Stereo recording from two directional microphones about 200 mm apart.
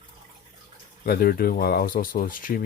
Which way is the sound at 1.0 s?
50° left (ahead or behind).